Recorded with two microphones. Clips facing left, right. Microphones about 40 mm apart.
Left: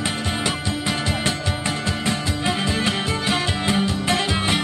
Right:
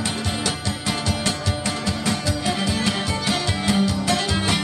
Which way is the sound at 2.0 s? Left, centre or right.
Left.